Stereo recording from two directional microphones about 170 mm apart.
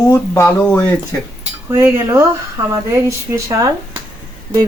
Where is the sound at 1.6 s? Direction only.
15° right (ahead or behind).